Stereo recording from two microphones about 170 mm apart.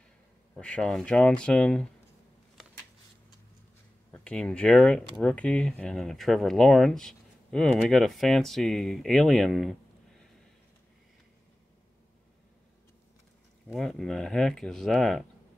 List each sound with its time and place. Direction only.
0.6 s speech: 5° left (ahead or behind)
4.1 s speech: 5° left (ahead or behind)
13.7 s speech: centre (ahead or behind)